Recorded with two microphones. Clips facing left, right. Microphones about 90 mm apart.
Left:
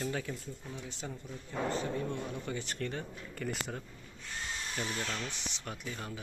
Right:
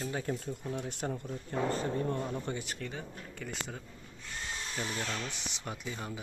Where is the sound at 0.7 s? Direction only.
55° right (ahead or behind); by 2.6 s 35° right (ahead or behind).